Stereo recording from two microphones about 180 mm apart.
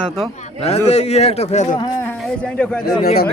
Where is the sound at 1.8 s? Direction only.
20° left (ahead or behind).